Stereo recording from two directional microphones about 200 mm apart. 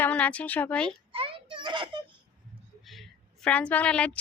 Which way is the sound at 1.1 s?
25° right (ahead or behind).